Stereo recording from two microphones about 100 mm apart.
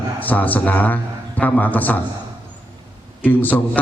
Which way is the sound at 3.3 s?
15° left (ahead or behind).